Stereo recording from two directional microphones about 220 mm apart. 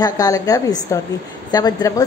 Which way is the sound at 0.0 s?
15° left (ahead or behind).